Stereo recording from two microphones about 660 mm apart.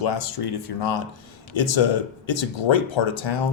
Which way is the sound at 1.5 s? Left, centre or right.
Left.